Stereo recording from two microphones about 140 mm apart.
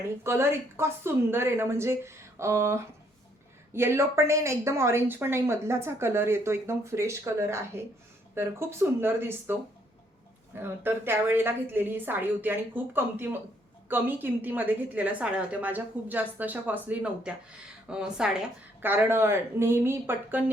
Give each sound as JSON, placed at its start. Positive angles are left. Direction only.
{"t": 0.3, "sound": "a woman's voice", "side_deg": -20}